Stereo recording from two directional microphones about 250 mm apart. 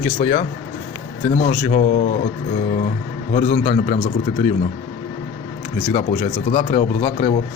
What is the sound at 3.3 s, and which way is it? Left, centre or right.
Speech, left.